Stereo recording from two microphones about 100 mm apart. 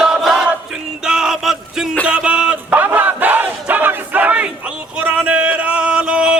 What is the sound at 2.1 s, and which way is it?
Battle cry, 10° right (ahead or behind).